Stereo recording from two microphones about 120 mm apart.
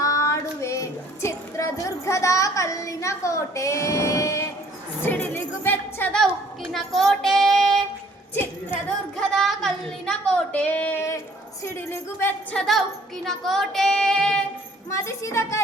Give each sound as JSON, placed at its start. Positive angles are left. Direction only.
{"t": 0.0, "sound": "child singing", "side_deg": 25}
{"t": 5.0, "sound": "a woman's voice", "side_deg": 20}
{"t": 6.7, "sound": "child singing", "side_deg": 0}
{"t": 9.3, "sound": "a woman's voice", "side_deg": 5}
{"t": 12.5, "sound": "child singing", "side_deg": 0}
{"t": 14.8, "sound": "speech", "side_deg": 25}